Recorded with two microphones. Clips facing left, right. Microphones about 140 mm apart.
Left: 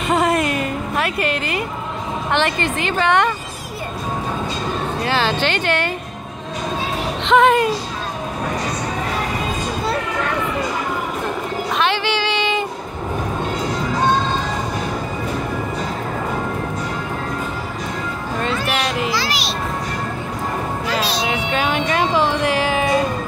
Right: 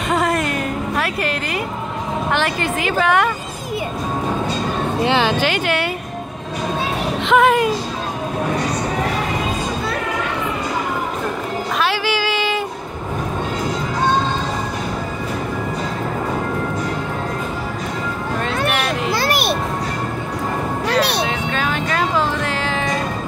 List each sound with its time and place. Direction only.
0.1 s music: centre (ahead or behind)
2.3 s speech: 5° right (ahead or behind)
5.0 s speech: 15° right (ahead or behind)
7.2 s speech: 5° right (ahead or behind)
11.8 s a sound: 5° right (ahead or behind)
18.5 s a sound: 60° right (ahead or behind)
19.0 s music: 55° right (ahead or behind)
20.8 s music: 65° right (ahead or behind)
21.3 s music: 10° left (ahead or behind)